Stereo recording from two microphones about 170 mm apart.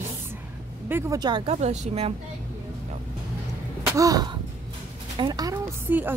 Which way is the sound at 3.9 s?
20° right (ahead or behind).